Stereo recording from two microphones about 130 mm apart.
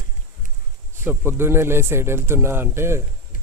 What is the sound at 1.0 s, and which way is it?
Speech, 20° right (ahead or behind).